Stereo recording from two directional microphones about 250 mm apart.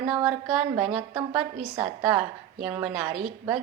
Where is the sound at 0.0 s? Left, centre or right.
Centre.